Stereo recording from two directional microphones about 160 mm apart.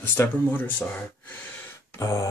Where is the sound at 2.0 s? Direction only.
20° left (ahead or behind).